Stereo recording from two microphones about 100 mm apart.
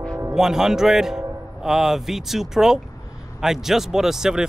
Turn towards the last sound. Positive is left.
turn(degrees=-5)  # may be behind; listen again after turning